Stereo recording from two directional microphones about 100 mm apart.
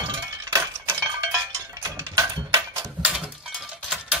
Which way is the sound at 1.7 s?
35° right (ahead or behind).